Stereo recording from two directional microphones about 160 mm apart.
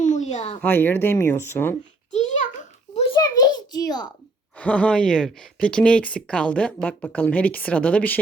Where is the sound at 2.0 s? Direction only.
50° left (ahead or behind).